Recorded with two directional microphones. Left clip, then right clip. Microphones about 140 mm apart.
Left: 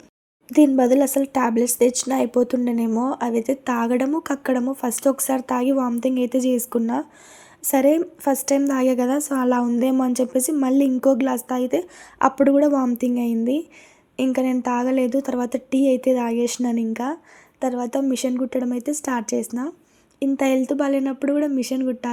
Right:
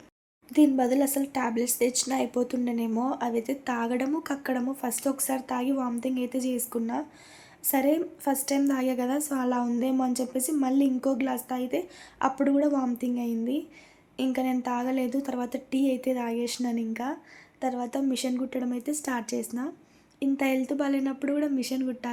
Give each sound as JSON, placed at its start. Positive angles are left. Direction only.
{"t": 0.4, "sound": "a woman's voice", "side_deg": 40}